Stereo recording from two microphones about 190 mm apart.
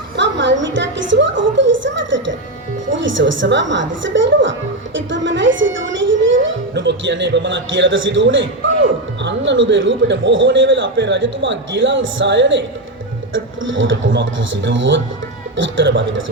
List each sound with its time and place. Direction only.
0.2 s a sound: 70° right (ahead or behind)
2.9 s a child's voice: 75° right (ahead or behind)
9.2 s a man's voice: 75° right (ahead or behind)
13.3 s a man's voice: 90° right